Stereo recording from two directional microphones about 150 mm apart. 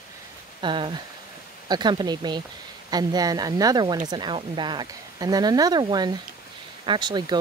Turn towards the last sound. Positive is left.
turn(degrees=-30)  # may be behind; listen again after turning